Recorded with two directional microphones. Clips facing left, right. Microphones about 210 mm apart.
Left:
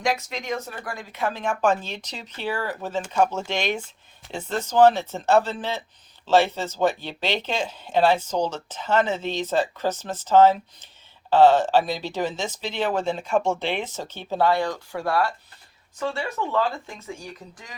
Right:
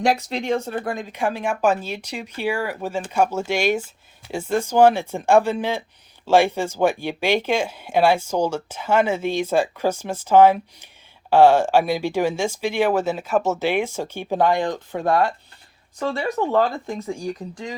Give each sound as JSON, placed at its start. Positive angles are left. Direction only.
{"t": 0.0, "sound": "speech", "side_deg": -35}
{"t": 16.0, "sound": "speech", "side_deg": -40}